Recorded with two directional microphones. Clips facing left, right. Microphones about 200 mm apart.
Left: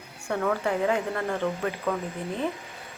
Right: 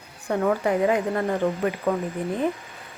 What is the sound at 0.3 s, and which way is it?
Speech, 20° right (ahead or behind).